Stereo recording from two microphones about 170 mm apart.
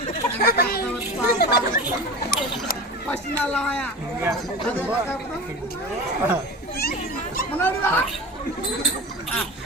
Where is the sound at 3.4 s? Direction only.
5° left (ahead or behind).